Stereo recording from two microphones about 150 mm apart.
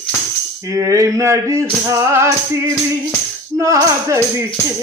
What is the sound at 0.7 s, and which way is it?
Speech, 20° right (ahead or behind).